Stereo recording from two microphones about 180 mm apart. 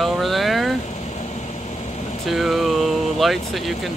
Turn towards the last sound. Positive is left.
turn(degrees=0)  # may be behind; listen again after turning